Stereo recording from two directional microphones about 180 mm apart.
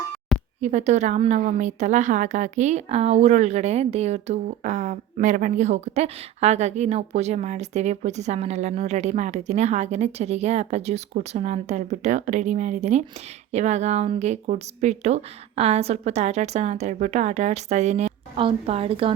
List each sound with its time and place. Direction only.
0.6 s a woman's voice: 40° right (ahead or behind)